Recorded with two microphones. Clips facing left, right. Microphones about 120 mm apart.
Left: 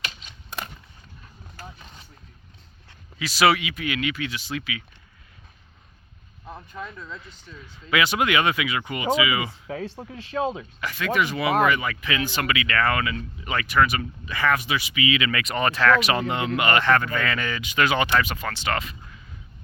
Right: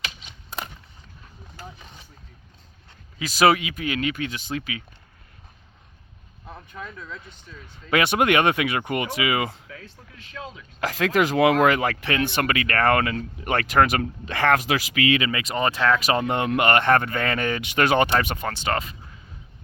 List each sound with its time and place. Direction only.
3.2 s speech: 40° right (ahead or behind)
6.7 s speech: 5° left (ahead or behind)
7.9 s speech: 50° right (ahead or behind)
9.6 s speech: 35° left (ahead or behind)
10.8 s speech: 90° right
12.1 s speech: 55° right (ahead or behind)
15.3 s speech: 30° right (ahead or behind)
16.2 s speech: 50° right (ahead or behind)
18.4 s speech: 30° right (ahead or behind)